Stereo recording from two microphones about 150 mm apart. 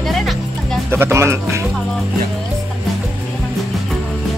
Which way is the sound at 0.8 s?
15° right (ahead or behind).